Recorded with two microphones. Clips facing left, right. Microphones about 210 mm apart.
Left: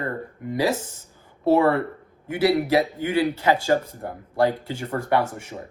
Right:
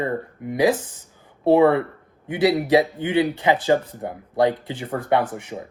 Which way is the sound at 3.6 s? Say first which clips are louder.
Right 2 dB; 15° right (ahead or behind).